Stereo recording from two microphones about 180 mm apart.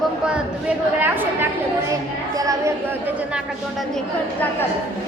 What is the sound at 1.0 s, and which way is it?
A woman's voice, 10° right (ahead or behind).